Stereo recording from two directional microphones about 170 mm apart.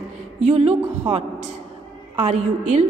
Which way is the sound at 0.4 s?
40° right (ahead or behind).